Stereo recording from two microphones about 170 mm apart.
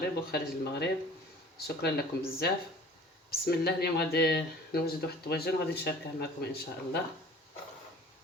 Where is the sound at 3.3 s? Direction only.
65° left (ahead or behind).